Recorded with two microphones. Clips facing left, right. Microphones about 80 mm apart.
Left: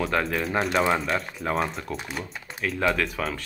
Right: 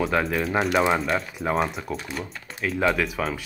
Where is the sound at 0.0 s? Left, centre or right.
Centre.